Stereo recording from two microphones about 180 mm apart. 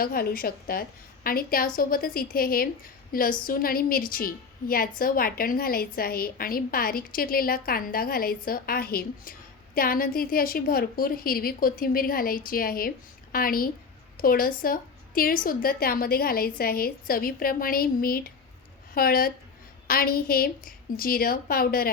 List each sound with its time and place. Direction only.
0.0 s a woman's voice: 55° left (ahead or behind)